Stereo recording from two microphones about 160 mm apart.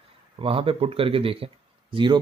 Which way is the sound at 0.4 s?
35° right (ahead or behind).